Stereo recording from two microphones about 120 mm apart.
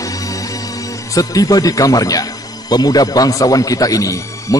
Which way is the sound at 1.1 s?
30° left (ahead or behind).